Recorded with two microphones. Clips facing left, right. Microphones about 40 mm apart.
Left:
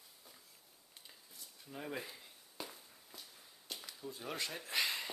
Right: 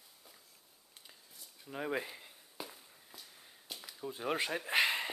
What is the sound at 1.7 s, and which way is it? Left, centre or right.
Speech, right.